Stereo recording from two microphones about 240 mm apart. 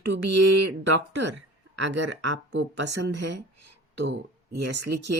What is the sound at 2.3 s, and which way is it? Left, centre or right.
Speech, right.